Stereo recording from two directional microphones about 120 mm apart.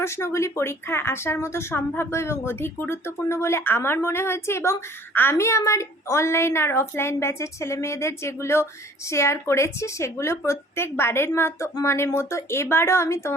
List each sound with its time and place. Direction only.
0.0 s speech: 25° left (ahead or behind)